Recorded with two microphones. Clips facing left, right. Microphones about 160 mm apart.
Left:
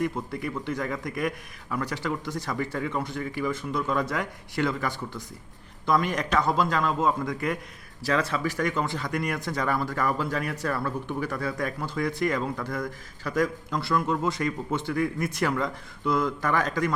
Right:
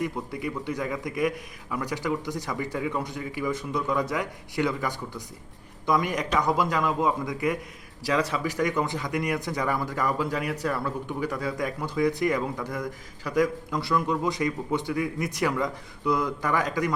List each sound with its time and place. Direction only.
0.0 s speech: 10° right (ahead or behind)